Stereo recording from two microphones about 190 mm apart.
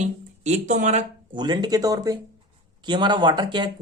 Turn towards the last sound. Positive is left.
turn(degrees=-25)  # may be behind; listen again after turning